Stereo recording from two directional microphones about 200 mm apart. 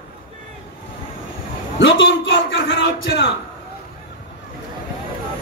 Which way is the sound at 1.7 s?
65° left (ahead or behind).